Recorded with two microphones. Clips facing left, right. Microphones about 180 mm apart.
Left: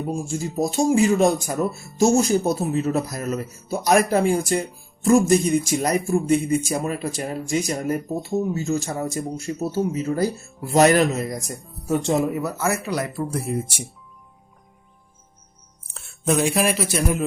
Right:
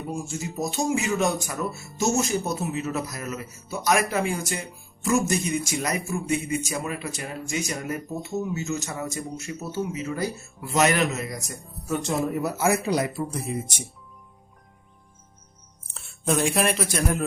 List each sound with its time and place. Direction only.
0.3 s speech: 30° left (ahead or behind)
12.5 s speech: 15° right (ahead or behind)
13.3 s speech: 10° left (ahead or behind)
15.9 s speech: centre (ahead or behind)